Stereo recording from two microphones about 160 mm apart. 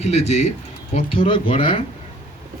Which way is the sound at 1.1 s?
35° left (ahead or behind).